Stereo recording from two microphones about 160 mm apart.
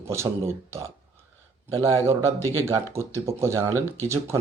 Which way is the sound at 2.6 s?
15° right (ahead or behind).